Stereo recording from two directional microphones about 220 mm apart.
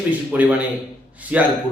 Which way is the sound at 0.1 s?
5° right (ahead or behind).